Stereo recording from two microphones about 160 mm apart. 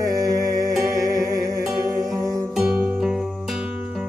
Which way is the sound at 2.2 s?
25° right (ahead or behind).